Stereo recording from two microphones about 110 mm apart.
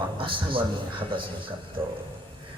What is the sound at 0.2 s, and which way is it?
A man's voice, 50° right (ahead or behind).